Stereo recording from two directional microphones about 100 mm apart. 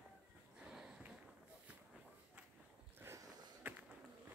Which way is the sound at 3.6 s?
15° right (ahead or behind).